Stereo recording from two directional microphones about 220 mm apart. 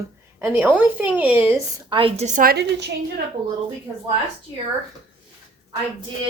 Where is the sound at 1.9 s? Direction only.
25° right (ahead or behind); by 2.9 s 45° right (ahead or behind).